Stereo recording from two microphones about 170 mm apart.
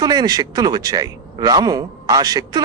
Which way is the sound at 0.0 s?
25° right (ahead or behind).